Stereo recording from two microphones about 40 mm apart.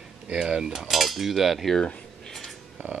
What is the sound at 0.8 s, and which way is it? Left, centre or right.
Cutlery, centre.